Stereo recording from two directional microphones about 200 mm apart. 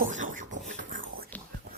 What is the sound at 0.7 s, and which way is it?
Whispering, 45° right (ahead or behind).